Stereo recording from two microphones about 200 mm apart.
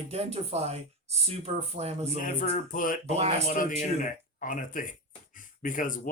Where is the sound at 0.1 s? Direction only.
30° right (ahead or behind).